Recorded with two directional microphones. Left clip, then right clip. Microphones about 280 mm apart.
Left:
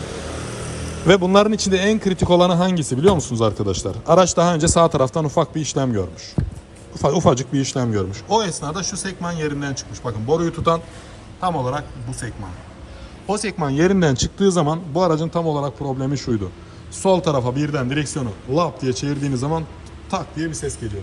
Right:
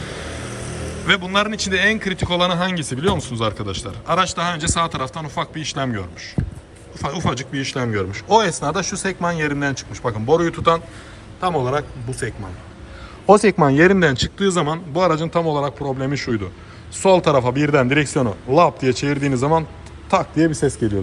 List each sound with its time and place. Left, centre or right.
1.0 s a man's voice: left
13.2 s speech: centre